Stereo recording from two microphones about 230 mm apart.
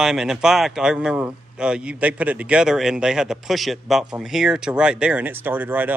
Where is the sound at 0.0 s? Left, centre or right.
Centre.